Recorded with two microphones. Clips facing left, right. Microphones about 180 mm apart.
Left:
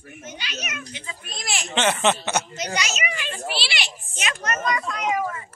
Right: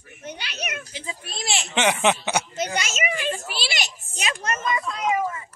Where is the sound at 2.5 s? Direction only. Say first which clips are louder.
Right 1 dB; 50° right (ahead or behind); by 4.5 s 35° right (ahead or behind).